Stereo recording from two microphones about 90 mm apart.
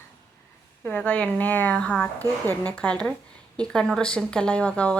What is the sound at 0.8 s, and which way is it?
Speech, 15° left (ahead or behind).